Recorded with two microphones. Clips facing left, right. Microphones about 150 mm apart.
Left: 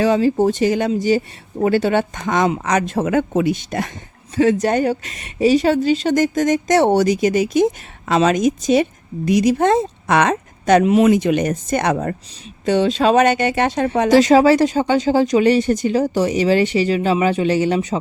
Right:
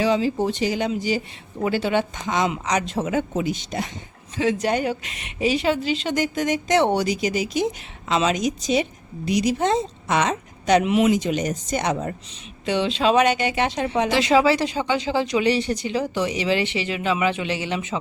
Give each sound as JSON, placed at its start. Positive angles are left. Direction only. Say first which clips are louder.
{"t": 0.0, "sound": "a woman's voice", "louder": "left 6 dB", "side_deg": 50}
{"t": 11.1, "sound": "speech", "louder": "left 6 dB", "side_deg": 60}
{"t": 12.6, "sound": "a woman's voice", "louder": "left 5 dB", "side_deg": 45}